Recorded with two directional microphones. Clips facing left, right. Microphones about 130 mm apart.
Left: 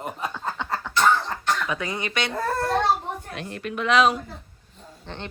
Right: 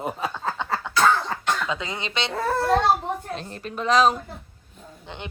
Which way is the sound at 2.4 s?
Centre (ahead or behind).